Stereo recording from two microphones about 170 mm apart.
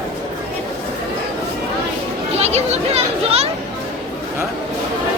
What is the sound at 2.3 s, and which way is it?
Speech, 40° right (ahead or behind).